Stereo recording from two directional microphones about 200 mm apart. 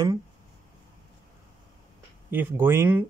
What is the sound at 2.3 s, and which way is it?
Speech, 10° right (ahead or behind).